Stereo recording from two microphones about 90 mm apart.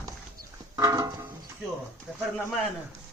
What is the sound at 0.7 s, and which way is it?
Music, 35° right (ahead or behind).